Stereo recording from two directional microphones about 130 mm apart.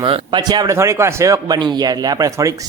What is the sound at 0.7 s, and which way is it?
Speech, 20° right (ahead or behind).